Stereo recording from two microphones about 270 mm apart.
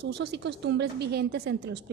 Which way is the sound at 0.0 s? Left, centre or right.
Right.